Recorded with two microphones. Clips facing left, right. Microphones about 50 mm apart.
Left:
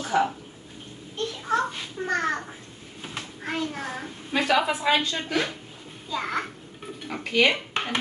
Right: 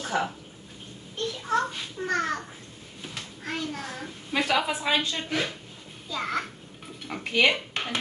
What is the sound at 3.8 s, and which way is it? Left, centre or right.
A woman's voice, centre.